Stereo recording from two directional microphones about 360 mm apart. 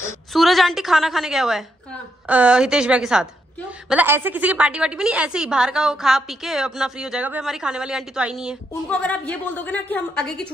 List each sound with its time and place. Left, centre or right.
0.0 s a woman's voice: centre